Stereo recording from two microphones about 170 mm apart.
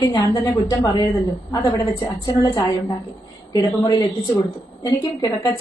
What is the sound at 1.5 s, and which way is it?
A woman's voice, 20° left (ahead or behind).